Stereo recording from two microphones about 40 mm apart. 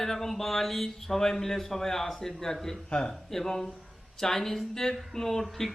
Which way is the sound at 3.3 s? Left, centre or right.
Centre.